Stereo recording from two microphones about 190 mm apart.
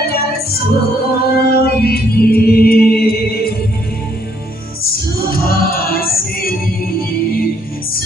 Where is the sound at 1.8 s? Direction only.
55° left (ahead or behind).